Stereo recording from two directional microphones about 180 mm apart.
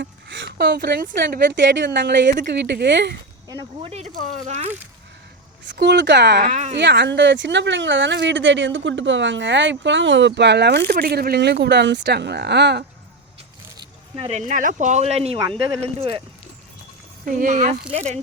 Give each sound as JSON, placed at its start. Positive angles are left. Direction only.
{"t": 0.0, "sound": "a sound", "side_deg": -85}
{"t": 0.6, "sound": "a woman's voice", "side_deg": -65}
{"t": 2.5, "sound": "speech", "side_deg": -70}
{"t": 3.8, "sound": "speech", "side_deg": -30}
{"t": 5.6, "sound": "speech", "side_deg": -70}
{"t": 6.4, "sound": "speech", "side_deg": -40}
{"t": 6.7, "sound": "speech", "side_deg": -75}
{"t": 10.9, "sound": "speech", "side_deg": -60}
{"t": 13.7, "sound": "speech", "side_deg": -35}
{"t": 17.2, "sound": "speech", "side_deg": -45}